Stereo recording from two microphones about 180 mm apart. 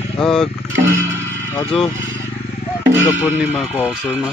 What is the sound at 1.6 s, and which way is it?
Speech, 30° left (ahead or behind).